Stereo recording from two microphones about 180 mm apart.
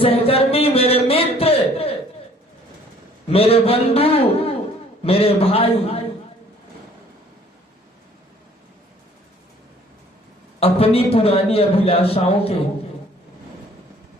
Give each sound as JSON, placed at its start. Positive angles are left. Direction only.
{"t": 0.0, "sound": "a sound", "side_deg": 30}
{"t": 3.2, "sound": "a man's voice", "side_deg": 35}
{"t": 10.6, "sound": "a man's voice", "side_deg": 35}